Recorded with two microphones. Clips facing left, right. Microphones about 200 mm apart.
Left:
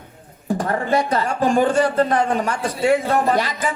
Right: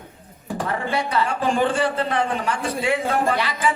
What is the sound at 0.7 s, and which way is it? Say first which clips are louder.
A man's voice: left 4 dB; 45° left (ahead or behind).